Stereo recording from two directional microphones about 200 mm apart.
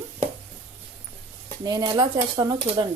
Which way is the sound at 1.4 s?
20° right (ahead or behind).